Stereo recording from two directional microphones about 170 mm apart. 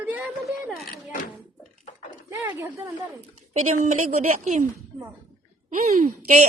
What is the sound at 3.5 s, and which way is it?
Speech, 45° right (ahead or behind).